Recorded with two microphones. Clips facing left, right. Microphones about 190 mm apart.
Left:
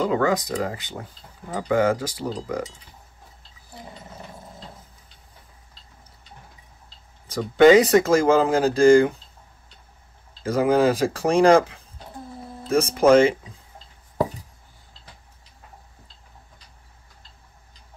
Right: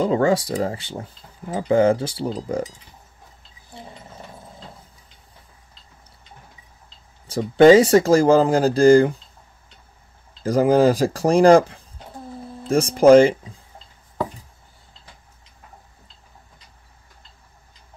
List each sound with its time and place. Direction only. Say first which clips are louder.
0.0 s speech: right 3 dB; 30° right (ahead or behind)
7.2 s speech: right 2 dB; 30° right (ahead or behind)
10.4 s speech: right 3 dB; 35° right (ahead or behind)